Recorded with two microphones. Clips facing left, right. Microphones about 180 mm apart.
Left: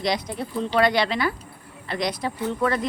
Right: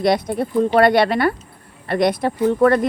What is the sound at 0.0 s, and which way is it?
Speech, 55° right (ahead or behind).